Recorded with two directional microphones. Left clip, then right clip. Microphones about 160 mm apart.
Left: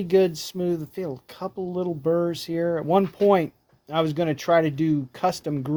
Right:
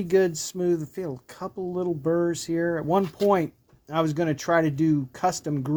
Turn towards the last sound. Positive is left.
turn(degrees=20)  # may be behind; listen again after turning